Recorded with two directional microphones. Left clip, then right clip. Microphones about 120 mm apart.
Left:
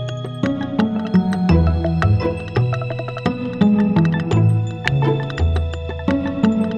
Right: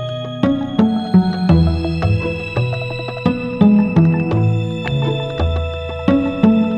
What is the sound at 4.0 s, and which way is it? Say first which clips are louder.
Music: right 3 dB; centre (ahead or behind).